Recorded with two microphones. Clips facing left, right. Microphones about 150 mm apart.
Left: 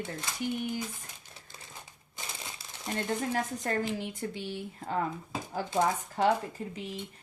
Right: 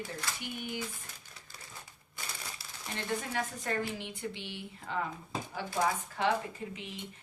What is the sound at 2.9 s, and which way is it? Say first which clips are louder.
Speech: left 4 dB; 45° left (ahead or behind).